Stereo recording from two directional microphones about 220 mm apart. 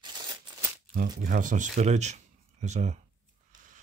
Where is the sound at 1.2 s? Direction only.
35° right (ahead or behind).